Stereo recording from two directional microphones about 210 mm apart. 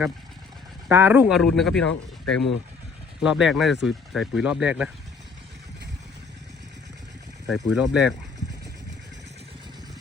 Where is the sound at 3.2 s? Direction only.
5° right (ahead or behind).